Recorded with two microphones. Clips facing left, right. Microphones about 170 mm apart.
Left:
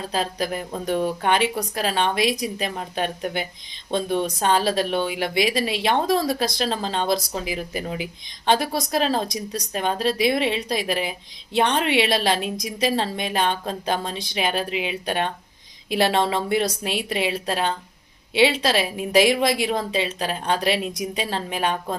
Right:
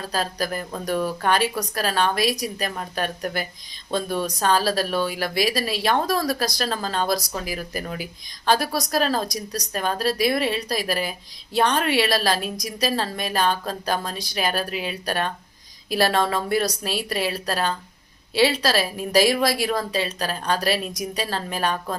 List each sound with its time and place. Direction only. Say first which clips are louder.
0.0 s a woman's voice: left 1 dB; 20° left (ahead or behind)